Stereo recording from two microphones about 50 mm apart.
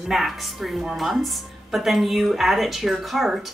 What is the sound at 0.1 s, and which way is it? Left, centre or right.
A woman's voice, centre.